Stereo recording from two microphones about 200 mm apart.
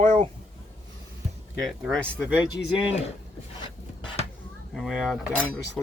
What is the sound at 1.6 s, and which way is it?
Cutlery, centre (ahead or behind).